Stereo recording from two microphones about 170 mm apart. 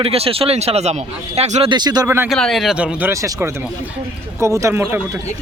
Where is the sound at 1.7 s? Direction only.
25° right (ahead or behind).